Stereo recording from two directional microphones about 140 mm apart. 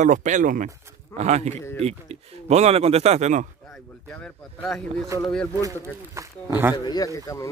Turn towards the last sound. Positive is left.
turn(degrees=25)  # may be behind; listen again after turning